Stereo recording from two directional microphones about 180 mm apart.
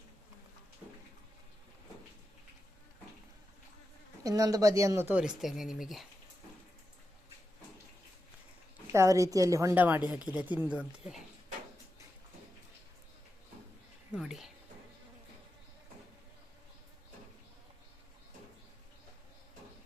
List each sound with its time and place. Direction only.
4.2 s speech: 20° right (ahead or behind); by 6.1 s centre (ahead or behind)
8.9 s speech: 15° right (ahead or behind)
14.1 s speech: centre (ahead or behind)